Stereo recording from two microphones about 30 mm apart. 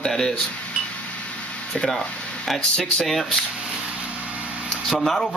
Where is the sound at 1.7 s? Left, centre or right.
Centre.